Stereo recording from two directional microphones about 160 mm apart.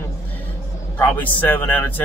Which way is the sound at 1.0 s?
10° left (ahead or behind).